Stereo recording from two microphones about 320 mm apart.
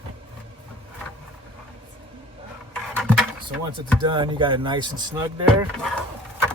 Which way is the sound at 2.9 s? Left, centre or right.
Centre.